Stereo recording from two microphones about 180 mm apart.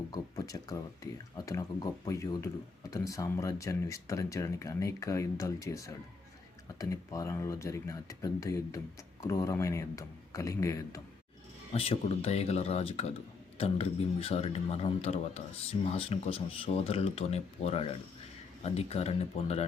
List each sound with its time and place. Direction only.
0.1 s speech: 20° left (ahead or behind)
11.7 s speech: 35° left (ahead or behind)